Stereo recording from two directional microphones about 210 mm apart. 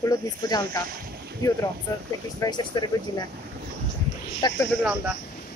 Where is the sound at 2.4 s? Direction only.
20° left (ahead or behind).